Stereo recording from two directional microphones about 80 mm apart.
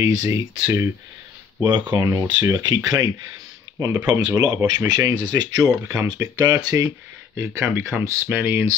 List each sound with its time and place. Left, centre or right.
0.0 s speech: right
1.6 s speech: right
7.5 s speech: right